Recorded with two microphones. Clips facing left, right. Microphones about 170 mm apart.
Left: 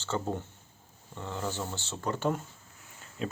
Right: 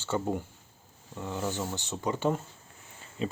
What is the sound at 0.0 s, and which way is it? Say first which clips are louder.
Speech: right 2 dB; 10° right (ahead or behind).